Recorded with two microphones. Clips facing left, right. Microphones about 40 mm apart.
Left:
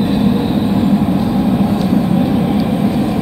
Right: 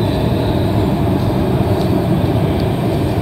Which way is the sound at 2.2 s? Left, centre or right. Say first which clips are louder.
Left 3 dB; centre.